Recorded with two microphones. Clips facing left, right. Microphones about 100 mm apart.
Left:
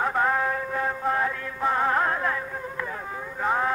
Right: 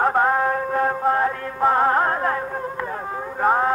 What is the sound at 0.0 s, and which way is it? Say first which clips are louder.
Music: right 5 dB; 40° right (ahead or behind).